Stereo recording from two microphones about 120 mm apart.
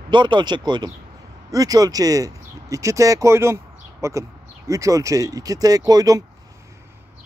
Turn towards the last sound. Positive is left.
turn(degrees=-30)  # may be behind; listen again after turning